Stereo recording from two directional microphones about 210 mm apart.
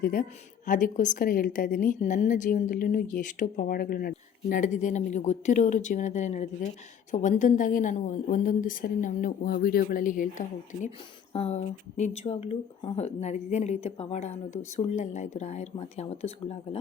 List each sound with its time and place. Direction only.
0.0 s a woman's voice: 40° left (ahead or behind)